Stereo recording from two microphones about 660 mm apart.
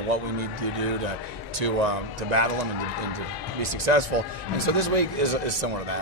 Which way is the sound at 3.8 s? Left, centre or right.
Right.